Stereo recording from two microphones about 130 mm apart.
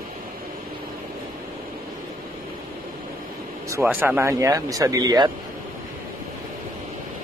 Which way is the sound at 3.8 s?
15° right (ahead or behind).